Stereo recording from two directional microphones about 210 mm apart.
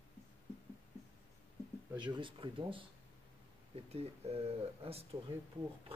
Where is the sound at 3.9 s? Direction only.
30° right (ahead or behind).